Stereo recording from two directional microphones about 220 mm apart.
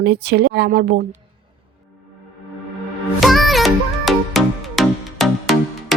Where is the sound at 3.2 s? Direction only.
Centre (ahead or behind).